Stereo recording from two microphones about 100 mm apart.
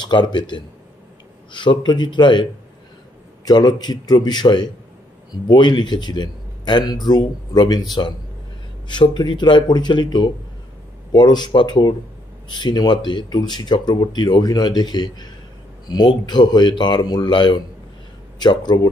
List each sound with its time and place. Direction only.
0.0 s a man's voice: 50° left (ahead or behind)
3.4 s a man's voice: 40° left (ahead or behind)
8.8 s a man's voice: 50° left (ahead or behind)